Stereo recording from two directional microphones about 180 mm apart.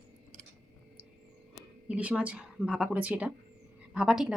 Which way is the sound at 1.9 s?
5° right (ahead or behind).